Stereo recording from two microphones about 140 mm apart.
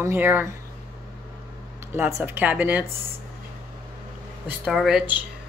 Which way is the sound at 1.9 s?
20° right (ahead or behind).